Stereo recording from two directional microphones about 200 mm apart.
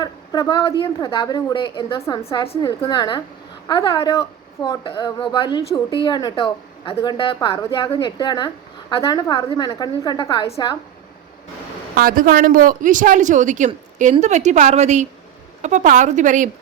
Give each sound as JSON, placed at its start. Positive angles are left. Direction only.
{"t": 0.0, "sound": "a sound", "side_deg": 20}
{"t": 0.8, "sound": "a woman's voice", "side_deg": 20}
{"t": 2.4, "sound": "a woman's voice", "side_deg": 25}
{"t": 11.9, "sound": "speech", "side_deg": -45}